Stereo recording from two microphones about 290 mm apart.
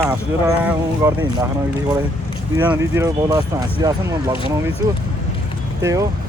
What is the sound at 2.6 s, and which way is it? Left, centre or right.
Speech, centre.